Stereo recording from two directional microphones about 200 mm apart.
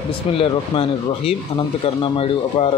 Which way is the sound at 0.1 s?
25° left (ahead or behind).